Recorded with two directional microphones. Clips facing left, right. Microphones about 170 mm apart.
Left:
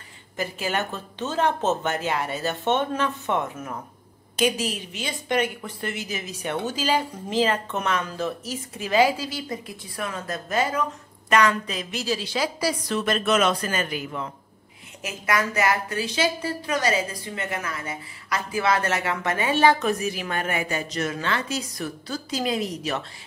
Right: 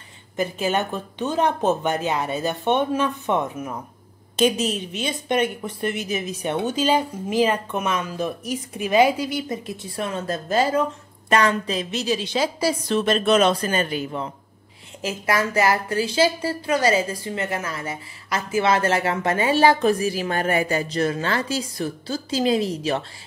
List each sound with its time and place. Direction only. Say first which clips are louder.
0.4 s a woman's voice: right 4 dB; 20° right (ahead or behind)